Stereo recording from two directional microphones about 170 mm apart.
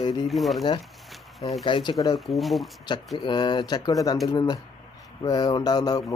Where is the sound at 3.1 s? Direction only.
25° left (ahead or behind).